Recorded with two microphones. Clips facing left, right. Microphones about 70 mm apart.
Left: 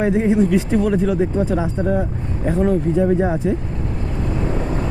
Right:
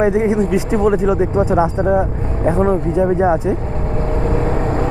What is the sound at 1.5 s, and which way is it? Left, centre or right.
Speech, right.